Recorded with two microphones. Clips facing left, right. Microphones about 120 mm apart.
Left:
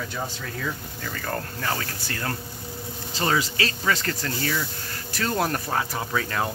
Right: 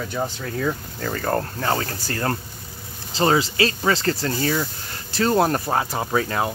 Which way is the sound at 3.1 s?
30° right (ahead or behind).